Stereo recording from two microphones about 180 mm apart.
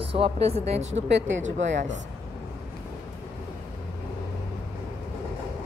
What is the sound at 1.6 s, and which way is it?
Speech, 85° right.